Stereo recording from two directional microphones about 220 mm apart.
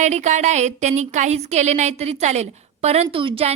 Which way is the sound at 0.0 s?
30° right (ahead or behind).